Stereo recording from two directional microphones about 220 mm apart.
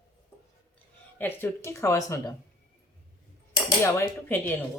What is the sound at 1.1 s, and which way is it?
Speech, 10° left (ahead or behind).